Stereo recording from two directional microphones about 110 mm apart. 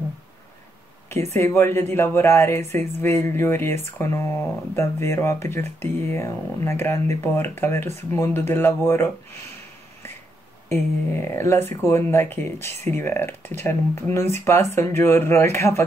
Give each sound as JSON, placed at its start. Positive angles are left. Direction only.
{"t": 1.3, "sound": "speech", "side_deg": 25}
{"t": 10.7, "sound": "speech", "side_deg": 20}